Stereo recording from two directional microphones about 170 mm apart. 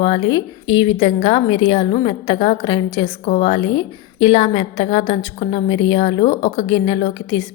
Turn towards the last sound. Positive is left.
turn(degrees=25)  # may be behind; listen again after turning